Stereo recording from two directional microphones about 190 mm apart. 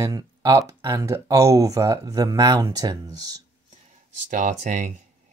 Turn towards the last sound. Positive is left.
turn(degrees=-40)  # may be behind; listen again after turning